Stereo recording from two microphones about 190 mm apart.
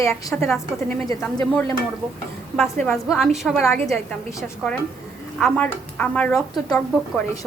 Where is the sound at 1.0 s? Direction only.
20° left (ahead or behind).